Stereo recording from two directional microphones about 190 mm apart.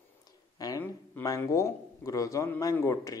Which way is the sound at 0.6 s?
15° left (ahead or behind).